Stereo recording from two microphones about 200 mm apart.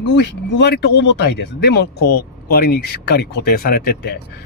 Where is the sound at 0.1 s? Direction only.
55° left (ahead or behind).